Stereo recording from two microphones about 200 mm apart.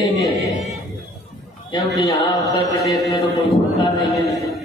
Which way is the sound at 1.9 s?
15° left (ahead or behind).